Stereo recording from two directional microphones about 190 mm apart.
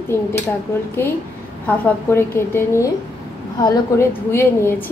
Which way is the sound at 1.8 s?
15° left (ahead or behind).